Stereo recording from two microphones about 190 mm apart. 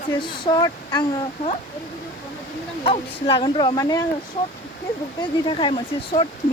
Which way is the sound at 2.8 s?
30° left (ahead or behind).